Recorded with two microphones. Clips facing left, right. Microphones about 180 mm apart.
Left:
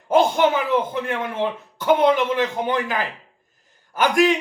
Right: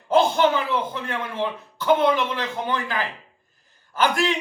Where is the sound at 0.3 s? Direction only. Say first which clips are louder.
Left 2 dB; 20° left (ahead or behind).